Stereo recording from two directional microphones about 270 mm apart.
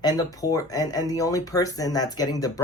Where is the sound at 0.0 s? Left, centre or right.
Centre.